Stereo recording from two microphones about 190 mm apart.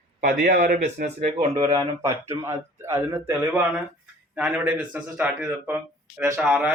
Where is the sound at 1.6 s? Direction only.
20° right (ahead or behind).